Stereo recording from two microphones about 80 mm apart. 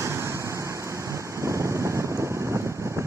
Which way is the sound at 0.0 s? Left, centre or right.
Right.